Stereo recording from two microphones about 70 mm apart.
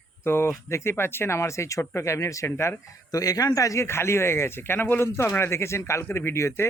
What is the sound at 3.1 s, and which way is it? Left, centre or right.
Speech, left.